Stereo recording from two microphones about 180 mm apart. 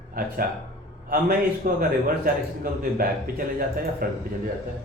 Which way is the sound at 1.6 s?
50° right (ahead or behind).